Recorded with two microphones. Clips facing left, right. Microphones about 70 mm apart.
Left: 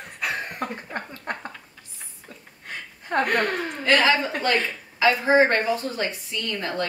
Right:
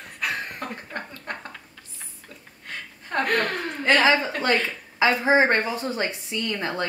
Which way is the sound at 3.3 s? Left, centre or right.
Centre.